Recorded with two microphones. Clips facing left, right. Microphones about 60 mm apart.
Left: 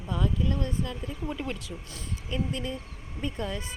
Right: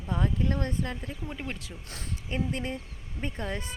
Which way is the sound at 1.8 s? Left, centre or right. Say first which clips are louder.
Even; right.